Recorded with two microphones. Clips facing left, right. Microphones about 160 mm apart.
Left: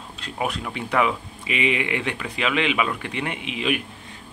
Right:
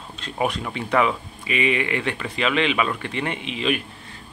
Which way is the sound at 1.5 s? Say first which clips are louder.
Right 1 dB; 15° left (ahead or behind).